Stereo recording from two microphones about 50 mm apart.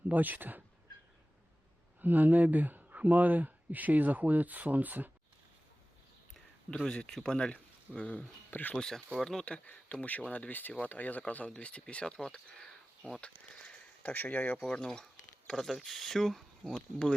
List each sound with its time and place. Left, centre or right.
0.1 s speech: right
2.0 s speech: right
6.7 s speech: centre
7.9 s speech: left
8.7 s speech: centre
9.5 s speech: left
10.5 s speech: left; by 12.7 s centre
13.2 s a sound: left
14.1 s speech: left
14.7 s speech: centre